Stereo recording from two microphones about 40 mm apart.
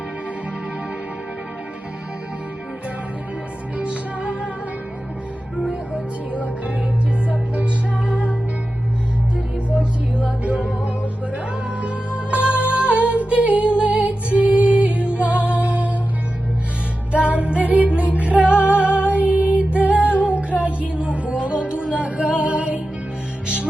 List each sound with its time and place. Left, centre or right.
3.8 s music: right
7.3 s music: right
9.6 s music: right
17.1 s music: right
20.6 s a sound: right
20.9 s music: right
22.4 s music: right